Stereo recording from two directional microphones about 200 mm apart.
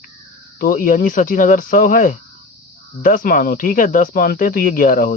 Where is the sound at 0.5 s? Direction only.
45° left (ahead or behind).